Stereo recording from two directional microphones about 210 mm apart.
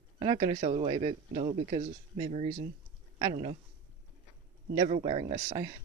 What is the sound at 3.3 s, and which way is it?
Speech, 30° right (ahead or behind).